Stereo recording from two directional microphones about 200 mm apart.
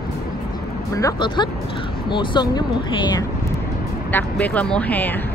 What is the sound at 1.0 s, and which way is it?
Speech, 20° left (ahead or behind).